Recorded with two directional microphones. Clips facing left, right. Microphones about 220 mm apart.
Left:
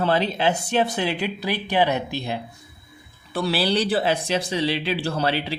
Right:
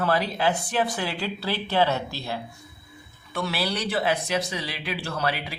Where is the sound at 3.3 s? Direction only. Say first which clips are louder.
Left 6 dB; 30° left (ahead or behind).